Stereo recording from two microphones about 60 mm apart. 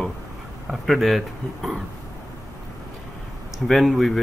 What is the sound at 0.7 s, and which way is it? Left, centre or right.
Speech, centre.